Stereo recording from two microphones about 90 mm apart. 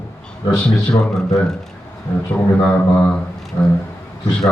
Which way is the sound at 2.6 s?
15° left (ahead or behind).